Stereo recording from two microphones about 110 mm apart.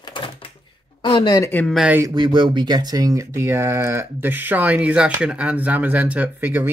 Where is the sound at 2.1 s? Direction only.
45° right (ahead or behind).